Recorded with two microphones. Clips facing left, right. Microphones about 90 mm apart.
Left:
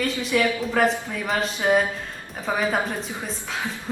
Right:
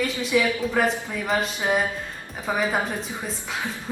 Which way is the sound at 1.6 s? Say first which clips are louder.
Left 7 dB; 15° right (ahead or behind).